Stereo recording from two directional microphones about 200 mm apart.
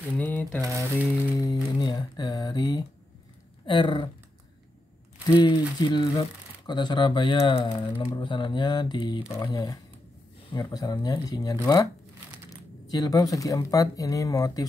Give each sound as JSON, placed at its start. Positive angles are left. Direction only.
{"t": 0.2, "sound": "speech", "side_deg": 10}
{"t": 0.6, "sound": "a sound", "side_deg": -15}
{"t": 1.3, "sound": "music", "side_deg": 20}
{"t": 3.6, "sound": "speech", "side_deg": 25}
{"t": 5.4, "sound": "speech", "side_deg": 20}